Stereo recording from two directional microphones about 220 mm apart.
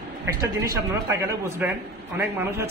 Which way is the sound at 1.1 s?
15° right (ahead or behind).